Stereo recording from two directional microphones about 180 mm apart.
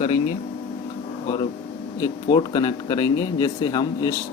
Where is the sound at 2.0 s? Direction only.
25° left (ahead or behind).